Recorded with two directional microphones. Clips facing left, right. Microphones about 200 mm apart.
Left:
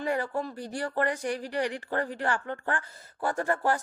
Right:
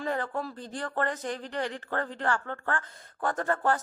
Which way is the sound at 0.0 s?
10° left (ahead or behind).